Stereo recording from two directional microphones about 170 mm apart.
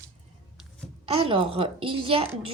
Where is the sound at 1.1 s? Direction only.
35° right (ahead or behind).